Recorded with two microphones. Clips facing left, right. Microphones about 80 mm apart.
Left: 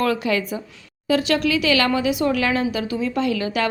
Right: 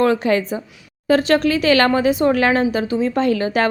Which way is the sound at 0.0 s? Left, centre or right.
Right.